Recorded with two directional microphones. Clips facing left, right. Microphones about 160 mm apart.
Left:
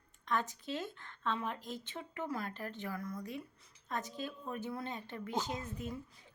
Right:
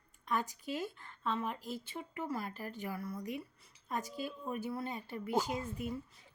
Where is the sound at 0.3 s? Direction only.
10° right (ahead or behind).